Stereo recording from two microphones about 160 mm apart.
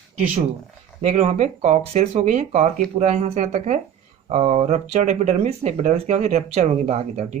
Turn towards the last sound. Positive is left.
turn(degrees=-40)  # may be behind; listen again after turning